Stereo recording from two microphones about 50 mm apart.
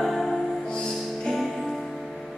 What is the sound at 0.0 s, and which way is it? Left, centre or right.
Music, centre.